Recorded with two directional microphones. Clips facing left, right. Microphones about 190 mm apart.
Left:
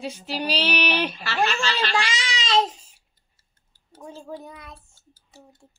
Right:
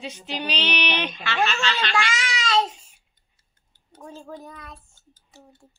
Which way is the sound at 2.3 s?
20° left (ahead or behind).